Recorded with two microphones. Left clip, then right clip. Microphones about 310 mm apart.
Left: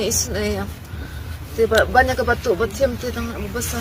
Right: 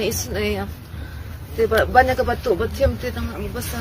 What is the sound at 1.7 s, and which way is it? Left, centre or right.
Speech, left.